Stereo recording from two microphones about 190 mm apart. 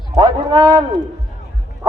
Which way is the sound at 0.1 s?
25° right (ahead or behind).